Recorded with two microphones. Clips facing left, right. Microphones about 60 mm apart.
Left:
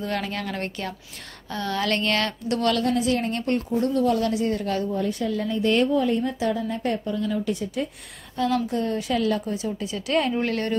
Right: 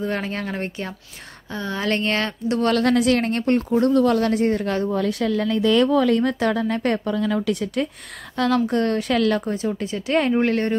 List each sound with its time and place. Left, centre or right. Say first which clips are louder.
0.0 s speech: right 3 dB; right
2.8 s a woman's voice: right 5 dB; right
3.3 s speech: right 5 dB; right
3.7 s a woman's voice: right 4 dB; right
4.9 s a woman's voice: right 4 dB; right
5.3 s a woman's voice: right 4 dB; right
9.5 s speech: right 4 dB; right